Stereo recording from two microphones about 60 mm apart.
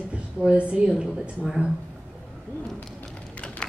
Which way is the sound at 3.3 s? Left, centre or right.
Left.